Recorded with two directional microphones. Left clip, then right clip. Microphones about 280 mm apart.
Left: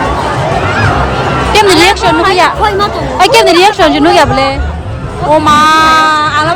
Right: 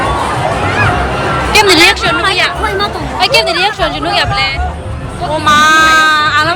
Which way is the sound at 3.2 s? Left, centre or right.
Left.